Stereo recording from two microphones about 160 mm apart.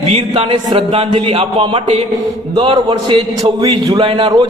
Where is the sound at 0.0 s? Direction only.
40° right (ahead or behind).